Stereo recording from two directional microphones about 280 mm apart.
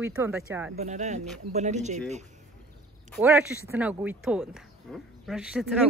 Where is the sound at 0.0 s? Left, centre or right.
Centre.